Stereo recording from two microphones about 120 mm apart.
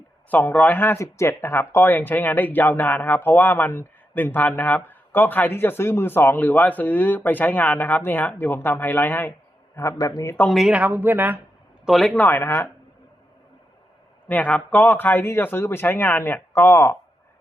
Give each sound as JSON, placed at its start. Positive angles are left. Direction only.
{"t": 0.3, "sound": "a man's voice", "side_deg": 15}
{"t": 10.5, "sound": "speech", "side_deg": -5}
{"t": 11.9, "sound": "speech", "side_deg": 0}
{"t": 12.2, "sound": "a man's voice", "side_deg": 20}
{"t": 14.3, "sound": "speech", "side_deg": 15}